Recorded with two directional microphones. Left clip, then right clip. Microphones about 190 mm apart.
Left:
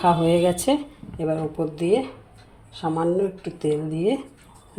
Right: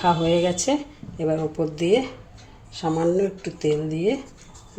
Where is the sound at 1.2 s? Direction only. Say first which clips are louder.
Right 1 dB; centre (ahead or behind).